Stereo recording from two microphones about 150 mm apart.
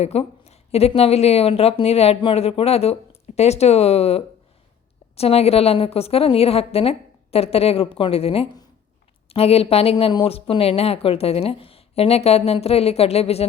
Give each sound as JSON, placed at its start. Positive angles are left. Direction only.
{"t": 0.0, "sound": "a woman's voice", "side_deg": 45}